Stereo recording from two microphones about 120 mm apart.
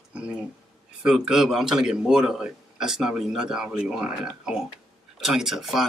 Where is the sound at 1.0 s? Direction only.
5° right (ahead or behind).